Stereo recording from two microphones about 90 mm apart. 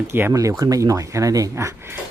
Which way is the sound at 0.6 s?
40° right (ahead or behind).